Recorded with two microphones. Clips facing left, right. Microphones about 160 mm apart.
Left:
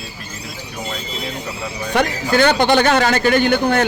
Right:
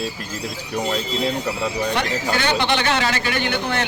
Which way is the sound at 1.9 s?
45° left (ahead or behind).